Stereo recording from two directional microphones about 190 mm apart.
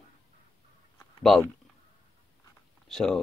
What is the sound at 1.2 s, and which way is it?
Speech, centre (ahead or behind).